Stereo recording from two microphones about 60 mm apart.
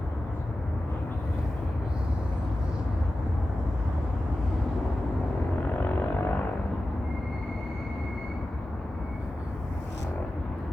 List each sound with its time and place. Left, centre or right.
5.6 s vehicle: left